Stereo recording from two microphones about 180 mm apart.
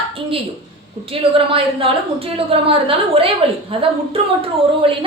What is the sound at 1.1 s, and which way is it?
A woman's voice, 30° right (ahead or behind).